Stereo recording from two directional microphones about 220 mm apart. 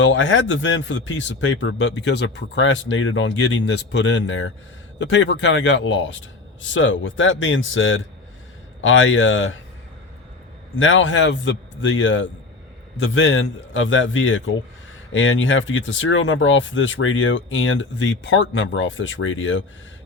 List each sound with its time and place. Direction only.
0.0 s speech: 60° left (ahead or behind)
10.8 s speech: 60° left (ahead or behind)